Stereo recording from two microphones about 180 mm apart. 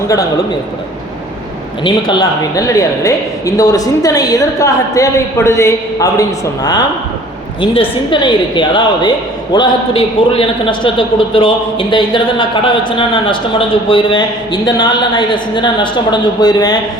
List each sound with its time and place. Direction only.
1.8 s a woman's voice: 25° left (ahead or behind)